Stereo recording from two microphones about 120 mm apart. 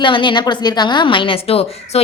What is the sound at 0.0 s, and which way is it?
A woman's voice, 45° left (ahead or behind).